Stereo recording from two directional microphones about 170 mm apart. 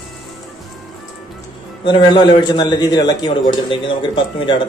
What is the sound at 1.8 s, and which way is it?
A man's voice, 30° left (ahead or behind).